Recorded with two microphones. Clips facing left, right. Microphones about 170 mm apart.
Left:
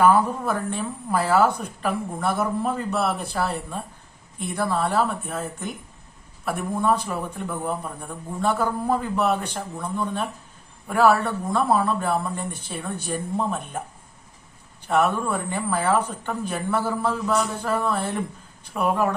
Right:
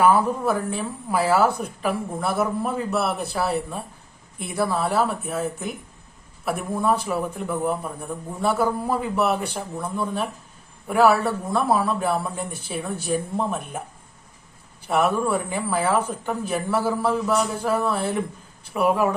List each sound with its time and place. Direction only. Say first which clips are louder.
0.0 s a woman's voice: even; 5° right (ahead or behind)
14.8 s speech: right 1 dB; 5° right (ahead or behind)